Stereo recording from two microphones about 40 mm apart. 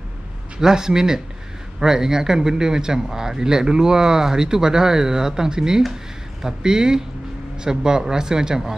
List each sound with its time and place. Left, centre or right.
0.6 s speech: centre